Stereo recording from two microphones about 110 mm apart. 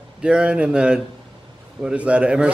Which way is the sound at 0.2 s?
10° right (ahead or behind).